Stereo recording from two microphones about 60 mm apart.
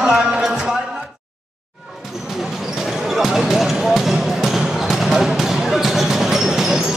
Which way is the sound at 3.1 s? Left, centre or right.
Centre.